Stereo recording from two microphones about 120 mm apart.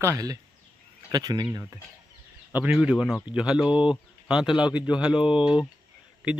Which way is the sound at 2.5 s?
15° right (ahead or behind).